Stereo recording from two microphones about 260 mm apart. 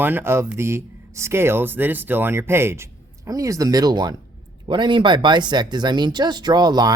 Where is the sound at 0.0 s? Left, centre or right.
Centre.